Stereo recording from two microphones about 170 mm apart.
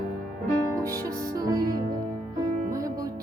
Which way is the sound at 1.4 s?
20° right (ahead or behind).